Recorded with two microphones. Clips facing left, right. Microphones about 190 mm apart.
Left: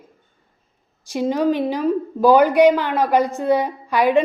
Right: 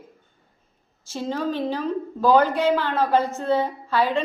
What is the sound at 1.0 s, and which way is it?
A woman's voice, 15° left (ahead or behind).